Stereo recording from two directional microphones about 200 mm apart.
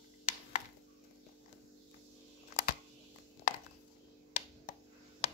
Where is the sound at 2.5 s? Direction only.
50° left (ahead or behind).